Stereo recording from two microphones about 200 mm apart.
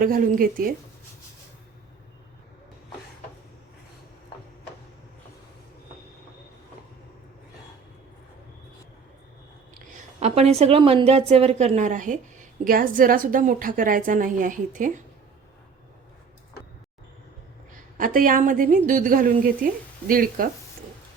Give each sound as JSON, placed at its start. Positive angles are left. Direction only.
{"t": 0.0, "sound": "a woman's voice", "side_deg": -45}
{"t": 9.7, "sound": "a woman's voice", "side_deg": -35}
{"t": 17.9, "sound": "a woman's voice", "side_deg": -45}